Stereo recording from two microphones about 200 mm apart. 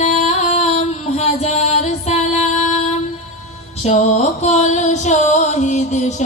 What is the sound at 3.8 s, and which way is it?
Music, 35° left (ahead or behind).